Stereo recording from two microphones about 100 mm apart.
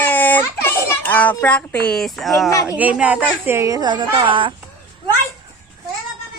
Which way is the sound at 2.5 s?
35° left (ahead or behind).